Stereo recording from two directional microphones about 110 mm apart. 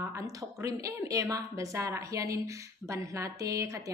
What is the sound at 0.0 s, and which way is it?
A woman's voice, 30° right (ahead or behind).